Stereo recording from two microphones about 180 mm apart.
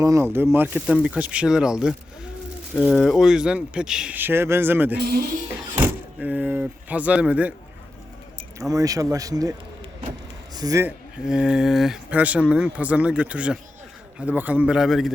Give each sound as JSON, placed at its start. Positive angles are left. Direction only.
{"t": 0.0, "sound": "speech", "side_deg": -15}
{"t": 4.9, "sound": "speech", "side_deg": -60}
{"t": 5.5, "sound": "vehicle", "side_deg": -10}
{"t": 8.7, "sound": "a man's voice", "side_deg": -20}
{"t": 11.3, "sound": "speech", "side_deg": -5}